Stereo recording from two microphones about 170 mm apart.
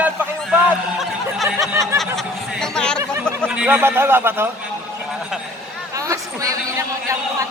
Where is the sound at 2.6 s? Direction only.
5° left (ahead or behind).